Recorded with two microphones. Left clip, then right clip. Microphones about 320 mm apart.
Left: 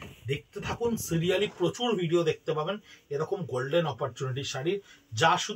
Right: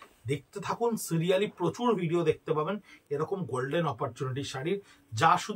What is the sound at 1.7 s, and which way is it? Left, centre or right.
Speech, centre.